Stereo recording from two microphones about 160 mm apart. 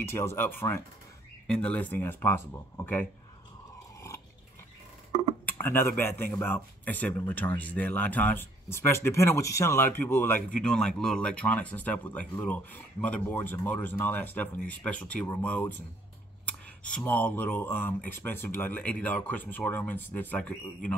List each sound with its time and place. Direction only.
0.0 s speech: 15° left (ahead or behind)
5.4 s speech: 10° left (ahead or behind)